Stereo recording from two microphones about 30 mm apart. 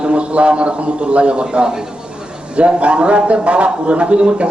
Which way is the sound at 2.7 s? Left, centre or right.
Right.